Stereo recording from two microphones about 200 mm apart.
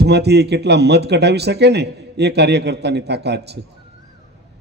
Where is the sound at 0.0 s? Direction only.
55° right (ahead or behind).